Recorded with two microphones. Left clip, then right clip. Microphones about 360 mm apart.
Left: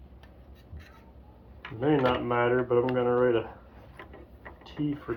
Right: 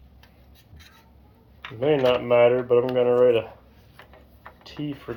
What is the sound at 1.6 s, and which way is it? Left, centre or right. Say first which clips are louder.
Speech: right 5 dB; right.